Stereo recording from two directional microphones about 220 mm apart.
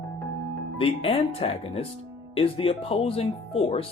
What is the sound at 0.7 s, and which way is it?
Speech, 25° left (ahead or behind).